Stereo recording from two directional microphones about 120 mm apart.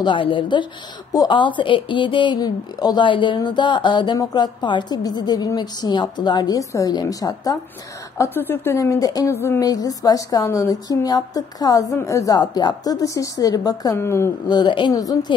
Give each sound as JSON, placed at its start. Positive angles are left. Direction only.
{"t": 0.0, "sound": "a woman's voice", "side_deg": 45}
{"t": 8.2, "sound": "a woman's voice", "side_deg": 20}
{"t": 9.7, "sound": "a woman's voice", "side_deg": 30}
{"t": 14.5, "sound": "a woman's voice", "side_deg": 40}